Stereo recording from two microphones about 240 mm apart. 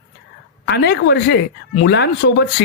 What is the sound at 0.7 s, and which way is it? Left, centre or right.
Speech, left.